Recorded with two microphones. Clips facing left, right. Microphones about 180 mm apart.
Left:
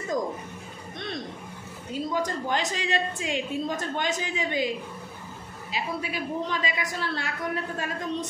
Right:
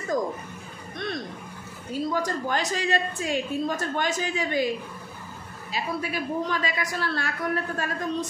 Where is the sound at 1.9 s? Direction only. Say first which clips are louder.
Right 1 dB; 20° left (ahead or behind).